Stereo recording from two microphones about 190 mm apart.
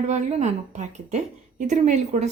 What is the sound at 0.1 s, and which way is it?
A woman's voice, 35° right (ahead or behind).